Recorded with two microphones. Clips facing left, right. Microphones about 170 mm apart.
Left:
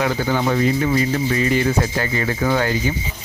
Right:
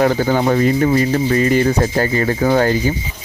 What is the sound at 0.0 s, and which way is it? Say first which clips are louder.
Speech: right 5 dB; 45° right (ahead or behind).